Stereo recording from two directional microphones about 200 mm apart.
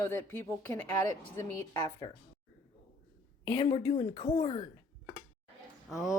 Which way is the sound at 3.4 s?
25° left (ahead or behind).